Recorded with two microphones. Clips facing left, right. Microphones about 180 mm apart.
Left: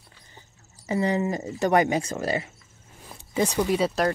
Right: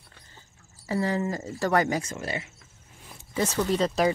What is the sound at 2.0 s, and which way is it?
Speech, 40° left (ahead or behind).